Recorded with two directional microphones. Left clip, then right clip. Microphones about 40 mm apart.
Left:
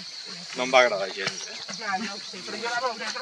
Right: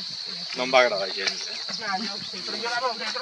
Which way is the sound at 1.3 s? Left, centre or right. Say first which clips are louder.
Right 4 dB; right.